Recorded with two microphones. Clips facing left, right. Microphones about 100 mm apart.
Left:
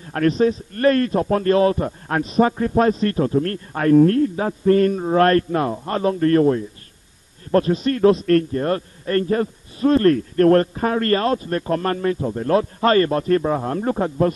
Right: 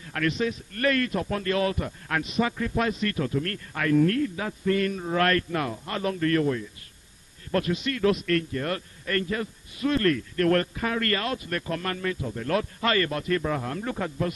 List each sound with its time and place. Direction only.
0.0 s a man's voice: 35° left (ahead or behind)